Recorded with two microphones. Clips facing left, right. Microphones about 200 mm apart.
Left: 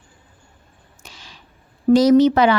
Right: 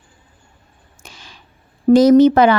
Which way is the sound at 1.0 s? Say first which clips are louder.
Right 2 dB; 50° right (ahead or behind).